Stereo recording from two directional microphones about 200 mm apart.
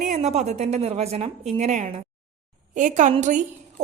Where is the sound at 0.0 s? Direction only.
35° right (ahead or behind).